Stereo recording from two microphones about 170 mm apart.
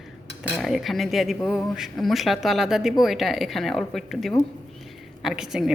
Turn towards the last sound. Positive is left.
turn(degrees=-5)  # may be behind; listen again after turning